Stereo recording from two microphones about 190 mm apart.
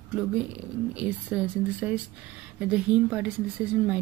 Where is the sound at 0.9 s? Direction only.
5° right (ahead or behind).